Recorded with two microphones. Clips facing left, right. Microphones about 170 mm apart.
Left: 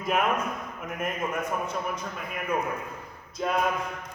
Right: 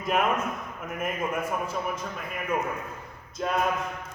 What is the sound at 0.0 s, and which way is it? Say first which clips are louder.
A man's voice: even; centre (ahead or behind).